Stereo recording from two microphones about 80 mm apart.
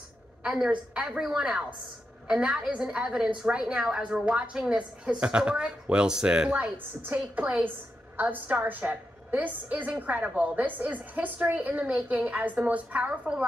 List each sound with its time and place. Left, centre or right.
0.4 s a woman's voice: centre